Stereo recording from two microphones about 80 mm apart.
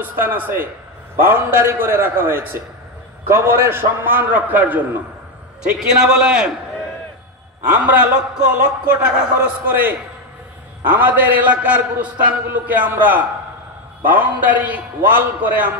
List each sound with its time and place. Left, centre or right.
0.0 s a man's voice: right
5.6 s a man's voice: centre
7.8 s a man's voice: centre
9.7 s a man's voice: right